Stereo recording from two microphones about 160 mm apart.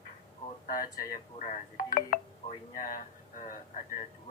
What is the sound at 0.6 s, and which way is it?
Speech, 60° left (ahead or behind).